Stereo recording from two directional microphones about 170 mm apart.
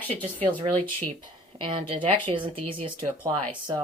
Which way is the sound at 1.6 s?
30° right (ahead or behind).